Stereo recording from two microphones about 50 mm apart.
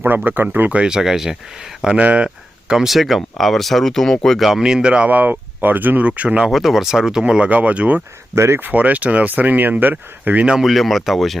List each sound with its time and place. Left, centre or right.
0.3 s speech: right
0.9 s speech: centre
2.0 s speech: right
2.6 s speech: centre
4.4 s speech: centre
5.0 s speech: right
6.1 s speech: right
6.5 s speech: centre; by 8.0 s right
8.4 s speech: right
8.6 s speech: right
10.6 s speech: centre